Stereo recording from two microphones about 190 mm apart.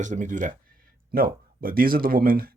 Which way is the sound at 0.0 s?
40° right (ahead or behind).